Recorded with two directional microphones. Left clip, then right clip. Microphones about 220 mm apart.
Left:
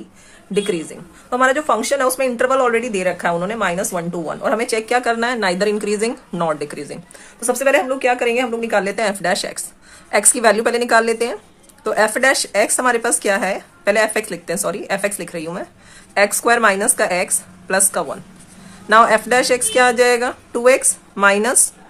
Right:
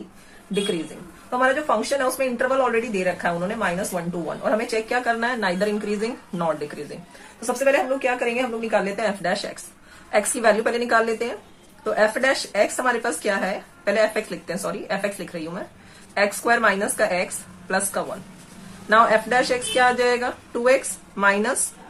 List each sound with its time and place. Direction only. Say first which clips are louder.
1.3 s speech: left 5 dB; 45° left (ahead or behind)